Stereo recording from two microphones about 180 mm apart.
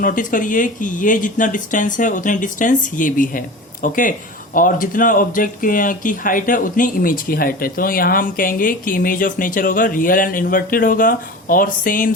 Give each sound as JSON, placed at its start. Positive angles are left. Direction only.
{"t": 0.0, "sound": "speech", "side_deg": 50}